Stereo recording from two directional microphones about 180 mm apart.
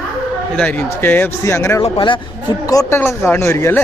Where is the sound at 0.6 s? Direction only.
5° left (ahead or behind).